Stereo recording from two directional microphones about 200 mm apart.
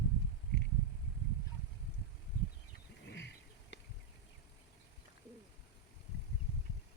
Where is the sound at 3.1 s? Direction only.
60° left (ahead or behind).